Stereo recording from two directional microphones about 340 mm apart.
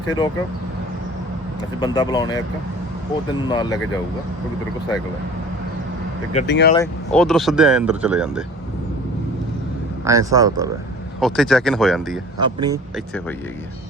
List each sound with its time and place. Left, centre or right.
1.8 s speech: centre
6.5 s speech: left
6.7 s speech: centre
10.0 s speech: centre
11.2 s speech: centre
12.4 s speech: centre